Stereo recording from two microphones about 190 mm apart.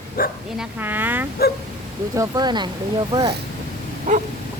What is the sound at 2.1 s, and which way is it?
Speech, 20° right (ahead or behind).